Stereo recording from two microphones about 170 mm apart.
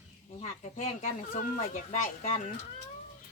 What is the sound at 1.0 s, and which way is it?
Speech, 50° left (ahead or behind).